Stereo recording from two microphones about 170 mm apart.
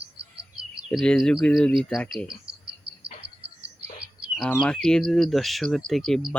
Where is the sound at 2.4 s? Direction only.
75° right (ahead or behind).